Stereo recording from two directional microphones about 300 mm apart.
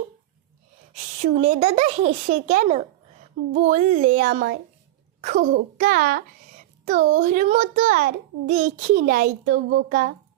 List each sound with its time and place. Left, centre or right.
0.9 s a child's voice: right